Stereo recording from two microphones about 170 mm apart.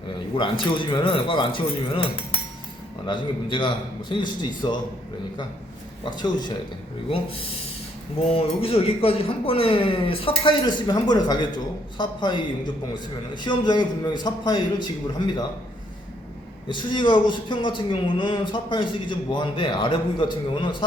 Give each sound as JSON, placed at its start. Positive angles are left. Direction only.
{"t": 0.3, "sound": "speech", "side_deg": 30}
{"t": 3.1, "sound": "speech", "side_deg": 30}
{"t": 6.1, "sound": "speech", "side_deg": 25}
{"t": 8.2, "sound": "speech", "side_deg": 35}
{"t": 16.6, "sound": "speech", "side_deg": 30}